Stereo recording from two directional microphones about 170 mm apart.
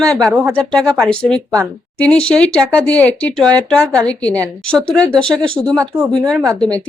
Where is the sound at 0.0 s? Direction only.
5° left (ahead or behind).